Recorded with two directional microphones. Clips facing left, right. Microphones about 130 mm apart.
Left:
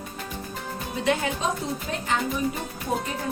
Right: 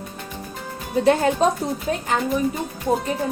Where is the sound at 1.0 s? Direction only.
40° right (ahead or behind).